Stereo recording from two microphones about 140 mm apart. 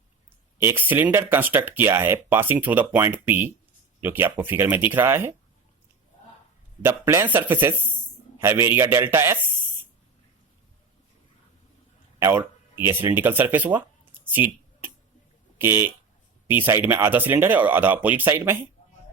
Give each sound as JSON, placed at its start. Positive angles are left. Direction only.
{"t": 0.6, "sound": "speech", "side_deg": -15}
{"t": 6.8, "sound": "speech", "side_deg": -15}
{"t": 12.2, "sound": "speech", "side_deg": -15}